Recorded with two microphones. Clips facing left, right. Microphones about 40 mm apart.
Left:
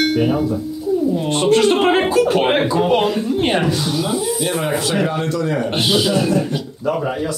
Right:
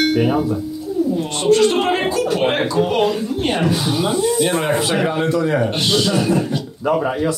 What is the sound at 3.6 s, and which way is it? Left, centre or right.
Speech, centre.